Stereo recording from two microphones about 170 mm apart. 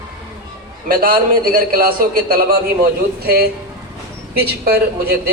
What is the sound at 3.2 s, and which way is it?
A man's voice, 65° right (ahead or behind).